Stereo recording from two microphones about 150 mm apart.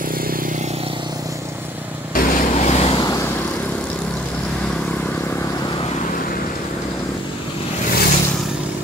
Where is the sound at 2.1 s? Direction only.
75° left (ahead or behind).